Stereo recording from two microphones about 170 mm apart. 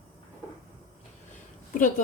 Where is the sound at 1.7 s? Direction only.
50° left (ahead or behind).